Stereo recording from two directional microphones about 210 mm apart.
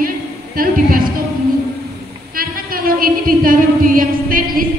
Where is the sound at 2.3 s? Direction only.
45° right (ahead or behind).